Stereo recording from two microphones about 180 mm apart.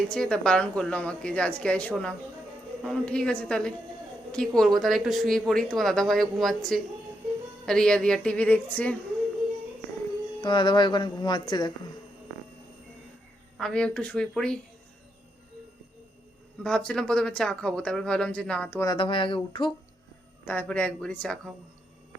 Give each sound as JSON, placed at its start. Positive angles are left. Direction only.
{"t": 0.1, "sound": "speech", "side_deg": 5}
{"t": 10.4, "sound": "speech", "side_deg": 25}
{"t": 13.6, "sound": "speech", "side_deg": 5}
{"t": 16.6, "sound": "speech", "side_deg": 5}
{"t": 18.9, "sound": "speech", "side_deg": 25}
{"t": 20.4, "sound": "speech", "side_deg": 10}